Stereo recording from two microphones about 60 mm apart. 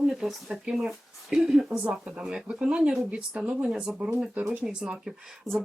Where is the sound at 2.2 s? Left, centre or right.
Centre.